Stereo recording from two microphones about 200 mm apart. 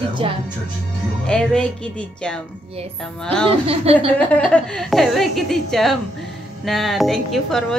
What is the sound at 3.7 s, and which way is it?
Speech, 30° right (ahead or behind).